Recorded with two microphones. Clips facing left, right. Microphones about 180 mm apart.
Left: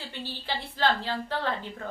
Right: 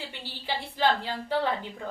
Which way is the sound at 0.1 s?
15° right (ahead or behind).